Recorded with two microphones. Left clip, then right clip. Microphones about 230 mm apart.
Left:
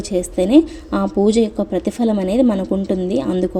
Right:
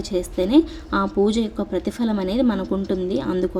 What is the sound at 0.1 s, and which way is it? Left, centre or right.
A woman's voice, centre.